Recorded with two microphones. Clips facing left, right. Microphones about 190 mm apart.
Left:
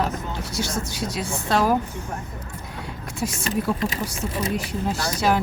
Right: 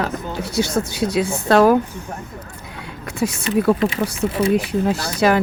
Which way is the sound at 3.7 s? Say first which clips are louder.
Right 8 dB; 60° right (ahead or behind).